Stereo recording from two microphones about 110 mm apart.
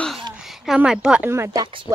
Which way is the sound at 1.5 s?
45° right (ahead or behind).